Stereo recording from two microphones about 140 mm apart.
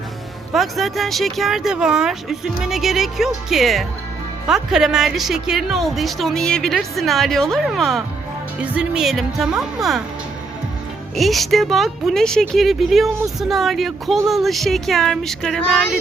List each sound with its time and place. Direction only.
0.5 s a woman's voice: centre (ahead or behind)
11.2 s a woman's voice: centre (ahead or behind)